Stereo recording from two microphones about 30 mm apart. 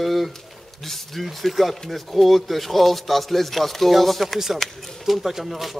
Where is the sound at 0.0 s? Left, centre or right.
Centre.